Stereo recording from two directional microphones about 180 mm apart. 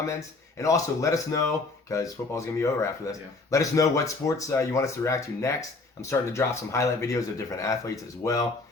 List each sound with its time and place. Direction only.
0.5 s speech: 15° left (ahead or behind)